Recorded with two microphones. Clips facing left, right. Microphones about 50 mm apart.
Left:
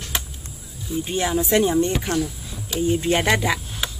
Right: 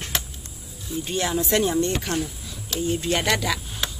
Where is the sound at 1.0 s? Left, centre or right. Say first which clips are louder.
Left 2 dB; centre.